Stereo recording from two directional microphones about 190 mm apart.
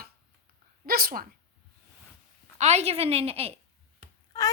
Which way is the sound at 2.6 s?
35° right (ahead or behind).